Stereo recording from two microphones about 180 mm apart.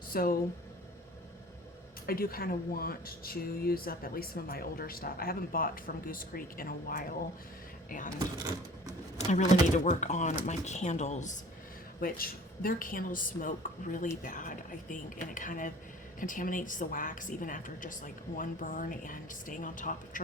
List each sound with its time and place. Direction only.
0.1 s speech: 55° left (ahead or behind)
2.0 s speech: 55° left (ahead or behind)
9.1 s speech: 40° left (ahead or behind)
11.9 s a woman's voice: 55° left (ahead or behind)